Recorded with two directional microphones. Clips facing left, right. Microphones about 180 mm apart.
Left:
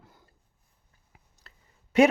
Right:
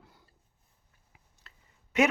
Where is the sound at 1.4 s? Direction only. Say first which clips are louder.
Left 1 dB; 35° left (ahead or behind).